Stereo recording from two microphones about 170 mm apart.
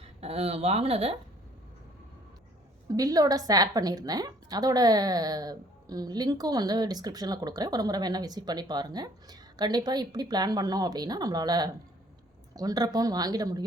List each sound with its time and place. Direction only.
0.0 s speech: 35° right (ahead or behind)
2.9 s a woman's voice: 20° right (ahead or behind)